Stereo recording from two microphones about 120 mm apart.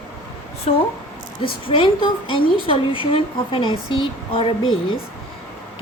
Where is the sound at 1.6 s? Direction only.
45° left (ahead or behind).